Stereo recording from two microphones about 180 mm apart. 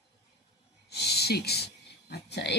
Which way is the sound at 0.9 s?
65° left (ahead or behind).